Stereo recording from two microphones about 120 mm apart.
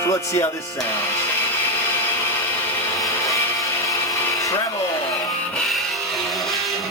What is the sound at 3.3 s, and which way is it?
Music, 25° left (ahead or behind).